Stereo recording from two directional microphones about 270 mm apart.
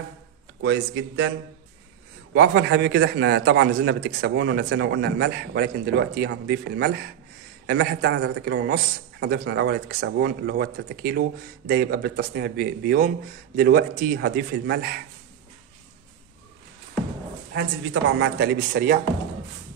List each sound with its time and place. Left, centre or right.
0.6 s speech: right
2.3 s a man's voice: right
17.5 s a woman's voice: right